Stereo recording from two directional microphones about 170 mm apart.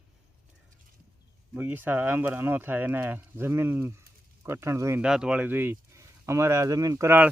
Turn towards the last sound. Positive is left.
turn(degrees=-15)  # may be behind; listen again after turning